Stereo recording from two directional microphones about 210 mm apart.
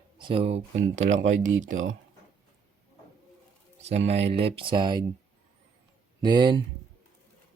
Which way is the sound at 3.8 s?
30° right (ahead or behind).